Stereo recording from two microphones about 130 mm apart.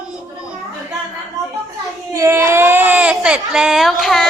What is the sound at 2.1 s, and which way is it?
Speech, 20° right (ahead or behind).